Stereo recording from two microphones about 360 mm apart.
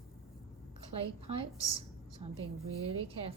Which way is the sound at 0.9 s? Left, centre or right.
Centre.